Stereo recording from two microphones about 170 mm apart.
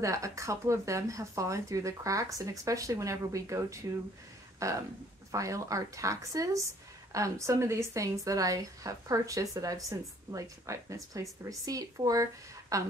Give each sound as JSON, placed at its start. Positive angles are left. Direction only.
{"t": 0.0, "sound": "speech", "side_deg": -20}